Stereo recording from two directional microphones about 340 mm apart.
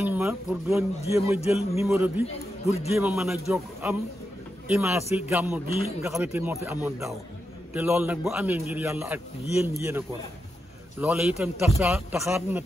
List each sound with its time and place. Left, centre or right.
0.0 s speech: centre
2.6 s a man's voice: centre
2.9 s speech: centre